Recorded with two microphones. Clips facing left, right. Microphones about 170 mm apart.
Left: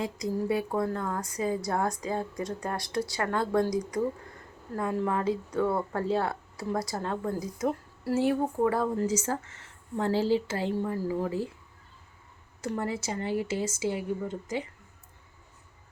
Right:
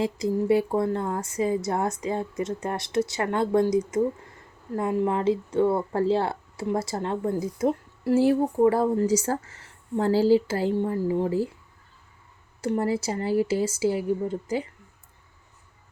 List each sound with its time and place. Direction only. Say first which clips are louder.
0.0 s speech: right 5 dB; 30° right (ahead or behind)
12.6 s speech: right 6 dB; 30° right (ahead or behind)